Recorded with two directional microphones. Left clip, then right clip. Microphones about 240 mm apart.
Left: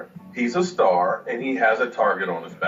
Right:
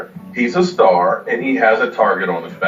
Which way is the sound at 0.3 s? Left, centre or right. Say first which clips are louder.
Right 7 dB; left.